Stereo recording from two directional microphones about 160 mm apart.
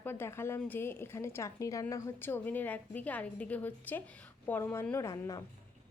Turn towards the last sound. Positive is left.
turn(degrees=20)  # may be behind; listen again after turning